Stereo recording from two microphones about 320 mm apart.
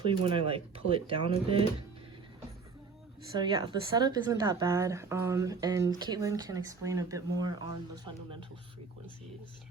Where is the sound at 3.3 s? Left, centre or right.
Centre.